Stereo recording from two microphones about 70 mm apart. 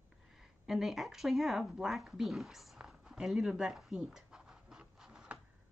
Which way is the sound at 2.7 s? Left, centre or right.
Centre.